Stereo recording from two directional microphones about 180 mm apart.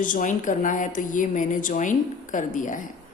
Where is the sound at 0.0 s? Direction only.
45° left (ahead or behind).